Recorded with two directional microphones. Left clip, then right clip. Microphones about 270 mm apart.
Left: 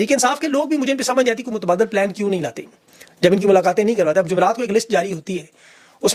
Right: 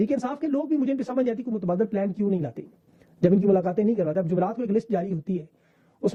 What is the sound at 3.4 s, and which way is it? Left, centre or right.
Speech, centre.